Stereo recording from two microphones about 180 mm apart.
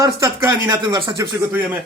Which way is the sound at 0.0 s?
15° right (ahead or behind).